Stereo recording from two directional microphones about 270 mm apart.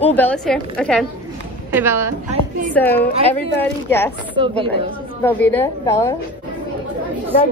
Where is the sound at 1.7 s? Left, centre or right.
Centre.